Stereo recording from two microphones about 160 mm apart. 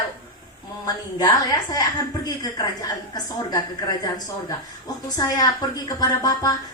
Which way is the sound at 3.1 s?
25° left (ahead or behind).